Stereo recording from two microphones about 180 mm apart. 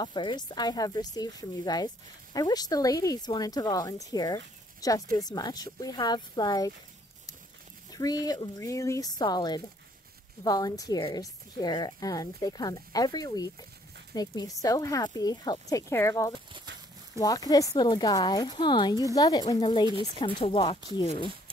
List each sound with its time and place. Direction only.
0.0 s a woman's voice: 25° left (ahead or behind)
7.9 s a woman's voice: 20° left (ahead or behind)